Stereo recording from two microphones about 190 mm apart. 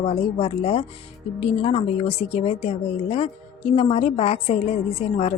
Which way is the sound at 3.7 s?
30° left (ahead or behind).